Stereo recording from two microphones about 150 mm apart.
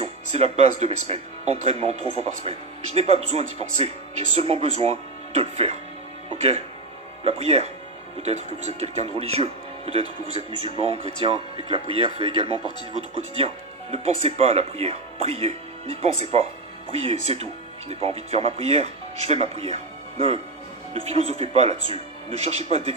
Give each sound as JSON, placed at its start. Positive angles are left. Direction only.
{"t": 0.0, "sound": "speech", "side_deg": -45}